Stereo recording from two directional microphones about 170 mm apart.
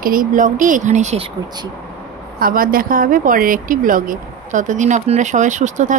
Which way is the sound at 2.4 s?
55° right (ahead or behind).